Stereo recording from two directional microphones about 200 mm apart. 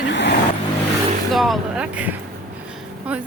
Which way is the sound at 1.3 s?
Centre (ahead or behind).